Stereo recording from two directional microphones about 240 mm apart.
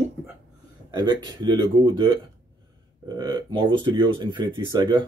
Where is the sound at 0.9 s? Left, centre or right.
Centre.